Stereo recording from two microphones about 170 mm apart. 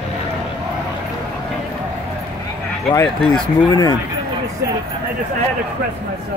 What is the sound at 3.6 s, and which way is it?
Speech, 20° left (ahead or behind).